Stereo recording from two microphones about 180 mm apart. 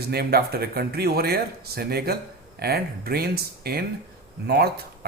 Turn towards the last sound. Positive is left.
turn(degrees=-60)  # may be behind; listen again after turning